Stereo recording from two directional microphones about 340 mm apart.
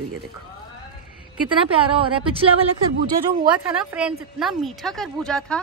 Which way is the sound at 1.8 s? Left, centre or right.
Centre.